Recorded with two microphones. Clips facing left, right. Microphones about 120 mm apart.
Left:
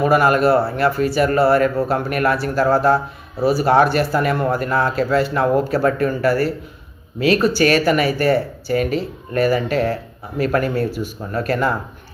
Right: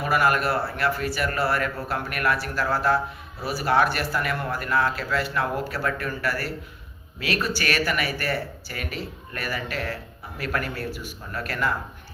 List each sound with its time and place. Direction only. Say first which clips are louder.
0.0 s speech: left 8 dB; 30° left (ahead or behind)